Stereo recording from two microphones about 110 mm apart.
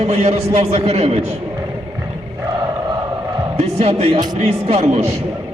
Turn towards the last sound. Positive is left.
turn(degrees=-70)  # may be behind; listen again after turning